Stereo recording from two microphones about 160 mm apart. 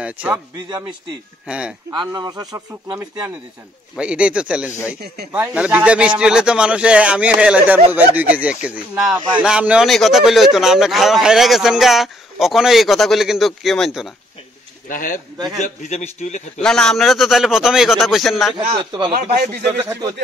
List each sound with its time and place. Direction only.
0.0 s a man's voice: 10° right (ahead or behind)
1.5 s speech: 5° right (ahead or behind)
1.9 s speech: 25° right (ahead or behind)
3.9 s speech: 5° right (ahead or behind)
5.0 s speech: 90° right
5.3 s speech: 10° right (ahead or behind)
14.9 s speech: 55° left (ahead or behind)
15.3 s speech: 25° right (ahead or behind)
15.6 s a man's voice: 45° left (ahead or behind)
16.6 s speech: 5° left (ahead or behind)
18.7 s speech: 30° right (ahead or behind)
19.8 s speech: 20° right (ahead or behind)